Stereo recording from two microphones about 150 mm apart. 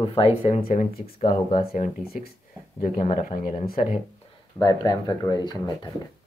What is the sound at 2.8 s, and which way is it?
Speech, 60° left (ahead or behind).